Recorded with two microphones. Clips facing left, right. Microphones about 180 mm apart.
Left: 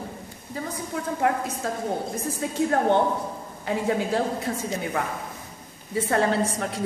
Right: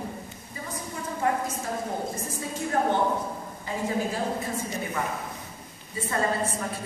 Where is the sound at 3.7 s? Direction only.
70° left (ahead or behind).